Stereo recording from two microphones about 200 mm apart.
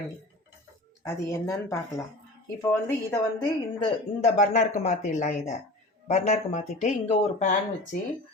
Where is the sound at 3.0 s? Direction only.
20° left (ahead or behind).